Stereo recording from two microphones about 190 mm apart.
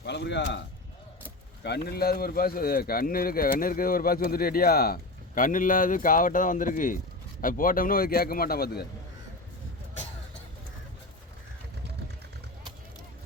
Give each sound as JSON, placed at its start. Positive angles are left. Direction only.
{"t": 0.0, "sound": "a man's voice", "side_deg": 65}
{"t": 1.6, "sound": "a man's voice", "side_deg": 60}